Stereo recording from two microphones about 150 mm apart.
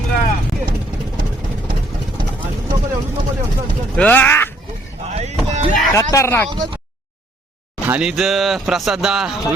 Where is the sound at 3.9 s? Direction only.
10° left (ahead or behind).